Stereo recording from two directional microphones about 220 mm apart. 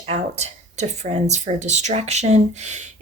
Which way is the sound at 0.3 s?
30° right (ahead or behind).